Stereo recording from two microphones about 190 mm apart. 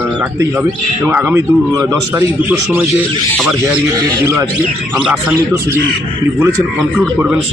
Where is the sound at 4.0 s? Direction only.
20° right (ahead or behind).